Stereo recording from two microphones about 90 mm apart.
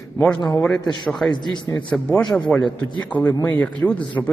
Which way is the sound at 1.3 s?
55° left (ahead or behind).